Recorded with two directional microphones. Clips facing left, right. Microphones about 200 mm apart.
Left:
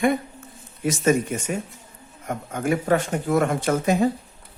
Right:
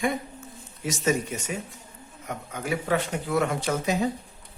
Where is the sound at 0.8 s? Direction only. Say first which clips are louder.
Left 5 dB; 55° left (ahead or behind).